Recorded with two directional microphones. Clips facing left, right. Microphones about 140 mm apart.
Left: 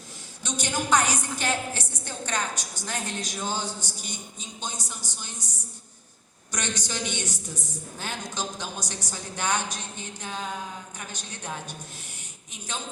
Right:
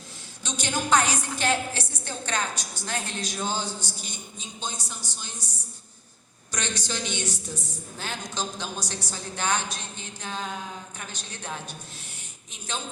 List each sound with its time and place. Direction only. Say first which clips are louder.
0.4 s a sound: even; 15° left (ahead or behind)
4.6 s a woman's voice: even; 15° left (ahead or behind)
6.5 s a woman's voice: even; 15° left (ahead or behind)